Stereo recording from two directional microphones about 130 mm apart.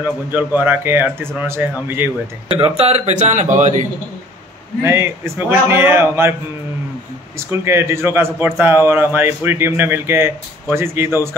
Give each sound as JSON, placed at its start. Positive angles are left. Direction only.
{"t": 0.0, "sound": "a man's voice", "side_deg": -15}
{"t": 2.5, "sound": "speech", "side_deg": -50}
{"t": 4.8, "sound": "a man's voice", "side_deg": -20}
{"t": 7.3, "sound": "a man's voice", "side_deg": -20}